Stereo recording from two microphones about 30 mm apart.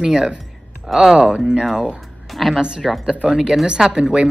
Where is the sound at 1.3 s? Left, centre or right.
Right.